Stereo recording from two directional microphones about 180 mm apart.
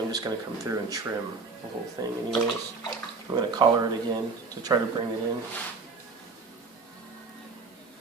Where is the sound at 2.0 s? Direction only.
20° right (ahead or behind).